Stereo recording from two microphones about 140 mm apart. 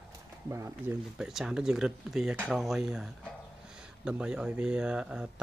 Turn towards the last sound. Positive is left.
turn(degrees=-5)  # may be behind; listen again after turning